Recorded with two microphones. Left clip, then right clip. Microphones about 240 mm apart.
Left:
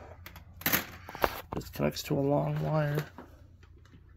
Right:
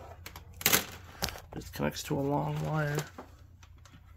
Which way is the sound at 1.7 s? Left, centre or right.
Centre.